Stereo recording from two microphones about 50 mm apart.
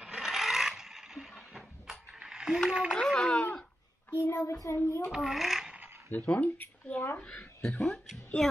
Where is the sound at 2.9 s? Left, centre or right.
Centre.